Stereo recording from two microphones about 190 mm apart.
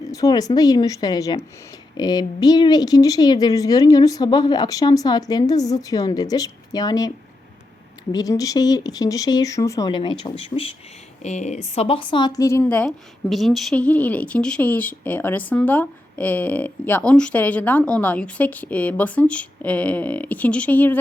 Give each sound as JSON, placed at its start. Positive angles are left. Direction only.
{"t": 0.0, "sound": "speech", "side_deg": 20}
{"t": 8.1, "sound": "speech", "side_deg": 20}